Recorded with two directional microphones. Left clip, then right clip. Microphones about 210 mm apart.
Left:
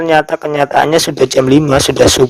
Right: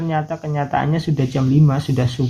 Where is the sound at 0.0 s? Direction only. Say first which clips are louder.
Left 12 dB; 55° left (ahead or behind).